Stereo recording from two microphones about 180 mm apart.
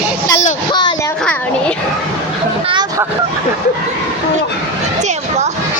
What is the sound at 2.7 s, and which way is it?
Vehicle, 25° right (ahead or behind).